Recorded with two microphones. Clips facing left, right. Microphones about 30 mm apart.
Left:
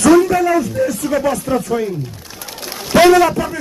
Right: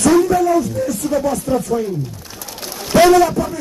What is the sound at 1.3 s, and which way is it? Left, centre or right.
Speech, left.